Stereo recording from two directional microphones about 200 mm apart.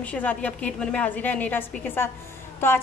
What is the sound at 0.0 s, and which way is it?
A woman's voice, 10° left (ahead or behind).